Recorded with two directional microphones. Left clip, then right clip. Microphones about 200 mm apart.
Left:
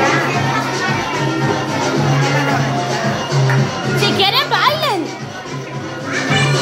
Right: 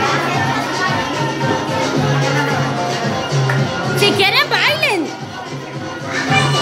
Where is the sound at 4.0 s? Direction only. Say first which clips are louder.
Right 1 dB; 25° right (ahead or behind).